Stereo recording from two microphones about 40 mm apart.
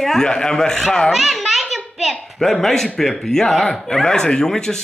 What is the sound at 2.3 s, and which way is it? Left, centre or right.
Speech, centre.